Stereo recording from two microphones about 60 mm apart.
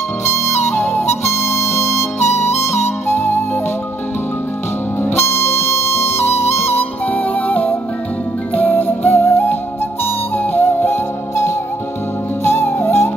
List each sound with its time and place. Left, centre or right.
0.2 s music: left
5.0 s music: left
12.4 s music: left